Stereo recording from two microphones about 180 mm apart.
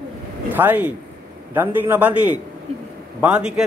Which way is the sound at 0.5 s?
10° right (ahead or behind).